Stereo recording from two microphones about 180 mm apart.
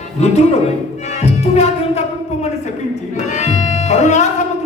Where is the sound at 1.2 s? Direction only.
35° left (ahead or behind).